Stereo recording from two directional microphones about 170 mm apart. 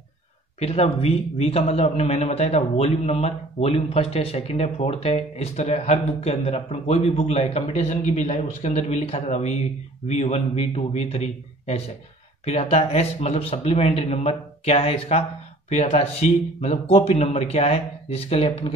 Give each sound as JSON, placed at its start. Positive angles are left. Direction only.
{"t": 0.6, "sound": "a man's voice", "side_deg": 35}